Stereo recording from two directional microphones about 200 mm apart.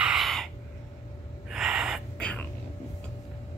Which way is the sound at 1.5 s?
5° right (ahead or behind).